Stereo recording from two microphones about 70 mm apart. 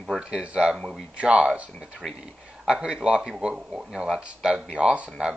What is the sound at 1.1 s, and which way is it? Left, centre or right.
Speech, centre.